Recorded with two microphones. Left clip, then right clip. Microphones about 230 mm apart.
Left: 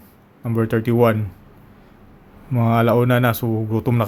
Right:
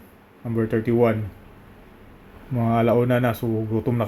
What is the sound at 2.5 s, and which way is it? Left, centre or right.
Speech, centre.